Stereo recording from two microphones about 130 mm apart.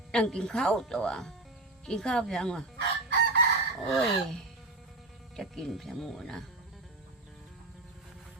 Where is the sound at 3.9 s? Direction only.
Centre (ahead or behind).